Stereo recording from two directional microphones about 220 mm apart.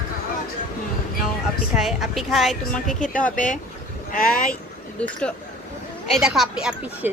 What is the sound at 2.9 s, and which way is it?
Speech, 35° left (ahead or behind).